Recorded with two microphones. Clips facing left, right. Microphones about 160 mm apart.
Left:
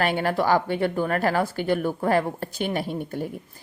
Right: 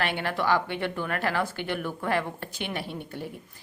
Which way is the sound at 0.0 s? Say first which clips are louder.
Left 5 dB; 40° left (ahead or behind).